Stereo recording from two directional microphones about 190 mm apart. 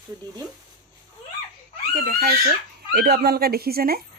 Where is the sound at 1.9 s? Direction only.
50° right (ahead or behind).